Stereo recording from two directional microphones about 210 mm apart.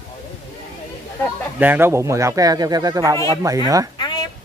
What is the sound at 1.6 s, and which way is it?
Speech, 10° right (ahead or behind).